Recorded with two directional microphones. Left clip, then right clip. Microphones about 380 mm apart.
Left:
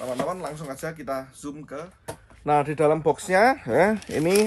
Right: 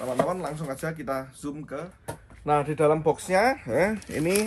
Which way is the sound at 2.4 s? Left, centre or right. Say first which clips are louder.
Left 2 dB; centre.